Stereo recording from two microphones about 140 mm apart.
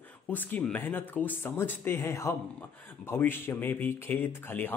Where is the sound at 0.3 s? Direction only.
10° left (ahead or behind).